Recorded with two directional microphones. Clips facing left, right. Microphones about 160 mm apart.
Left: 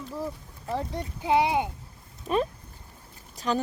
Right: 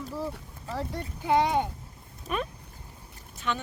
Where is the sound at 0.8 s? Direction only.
15° left (ahead or behind).